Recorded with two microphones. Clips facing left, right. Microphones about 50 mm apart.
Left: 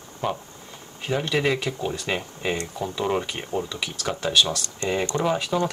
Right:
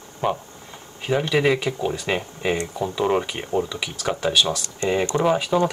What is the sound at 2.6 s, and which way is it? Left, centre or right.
Speech, centre.